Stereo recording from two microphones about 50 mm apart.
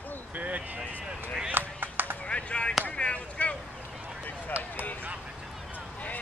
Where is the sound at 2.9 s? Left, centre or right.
Left.